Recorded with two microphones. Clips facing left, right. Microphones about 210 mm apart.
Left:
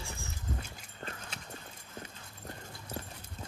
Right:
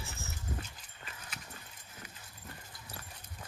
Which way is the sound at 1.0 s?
60° left (ahead or behind).